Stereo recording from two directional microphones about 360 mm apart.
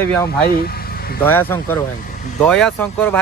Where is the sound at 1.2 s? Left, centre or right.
Centre.